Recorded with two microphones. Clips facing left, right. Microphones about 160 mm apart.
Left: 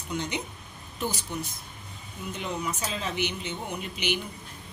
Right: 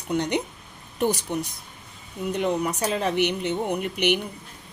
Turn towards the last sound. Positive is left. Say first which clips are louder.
# right 8 dB
turn(degrees=-60)  # may be behind; listen again after turning